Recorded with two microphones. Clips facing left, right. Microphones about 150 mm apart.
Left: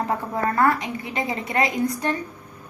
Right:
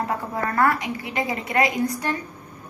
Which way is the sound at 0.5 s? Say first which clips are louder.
Right 1 dB; 25° left (ahead or behind).